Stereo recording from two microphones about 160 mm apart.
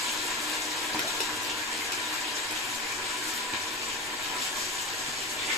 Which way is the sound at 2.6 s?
Centre (ahead or behind).